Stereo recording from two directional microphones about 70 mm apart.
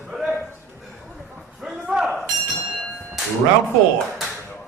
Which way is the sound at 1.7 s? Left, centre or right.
Centre.